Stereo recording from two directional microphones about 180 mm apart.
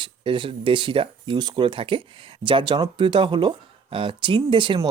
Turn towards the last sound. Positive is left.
turn(degrees=-30)  # may be behind; listen again after turning